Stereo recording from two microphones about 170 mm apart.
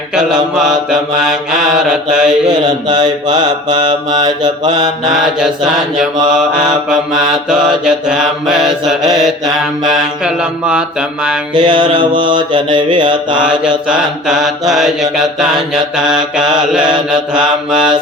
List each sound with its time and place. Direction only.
0.1 s mantra: 5° right (ahead or behind)
2.6 s mantra: 25° right (ahead or behind)
5.1 s mantra: 5° right (ahead or behind)
9.8 s mantra: 5° right (ahead or behind)
11.5 s mantra: 25° right (ahead or behind)
13.4 s mantra: 5° right (ahead or behind)